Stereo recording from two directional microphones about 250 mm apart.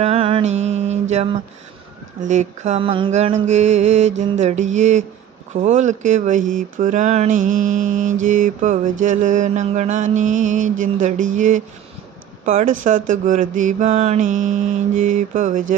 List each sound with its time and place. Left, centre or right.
0.0 s mantra: right
12.5 s speech: right
12.8 s mantra: right